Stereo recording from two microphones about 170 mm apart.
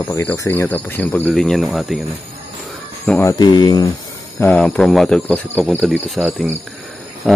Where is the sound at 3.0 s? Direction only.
10° left (ahead or behind).